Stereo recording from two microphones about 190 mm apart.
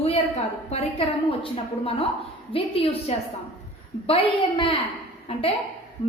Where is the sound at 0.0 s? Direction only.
35° left (ahead or behind).